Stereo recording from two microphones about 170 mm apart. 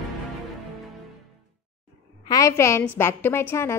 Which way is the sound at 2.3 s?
20° left (ahead or behind).